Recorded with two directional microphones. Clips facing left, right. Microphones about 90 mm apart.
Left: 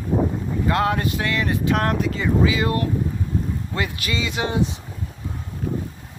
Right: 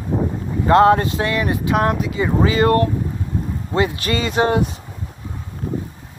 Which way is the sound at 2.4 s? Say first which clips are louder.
Right 7 dB; 45° right (ahead or behind).